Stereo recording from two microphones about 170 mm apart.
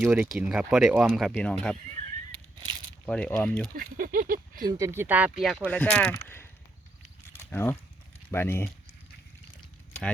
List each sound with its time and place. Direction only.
0.0 s speech: 10° right (ahead or behind)
1.3 s speech: 5° left (ahead or behind)
2.3 s a sound: 30° right (ahead or behind)
3.1 s speech: 5° left (ahead or behind)
3.8 s speech: 55° right (ahead or behind)
4.8 s speech: 15° right (ahead or behind); by 6.5 s 15° left (ahead or behind)
7.3 s a sound: 15° left (ahead or behind)
8.3 s speech: 15° left (ahead or behind)